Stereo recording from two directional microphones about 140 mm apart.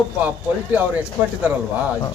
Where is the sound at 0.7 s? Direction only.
10° right (ahead or behind).